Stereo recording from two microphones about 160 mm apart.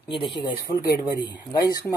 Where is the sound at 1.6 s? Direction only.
20° left (ahead or behind).